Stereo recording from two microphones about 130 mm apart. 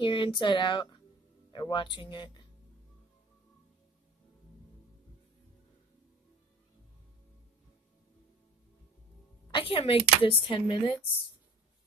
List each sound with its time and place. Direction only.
0.0 s speech: 40° left (ahead or behind)
9.5 s speech: 40° left (ahead or behind)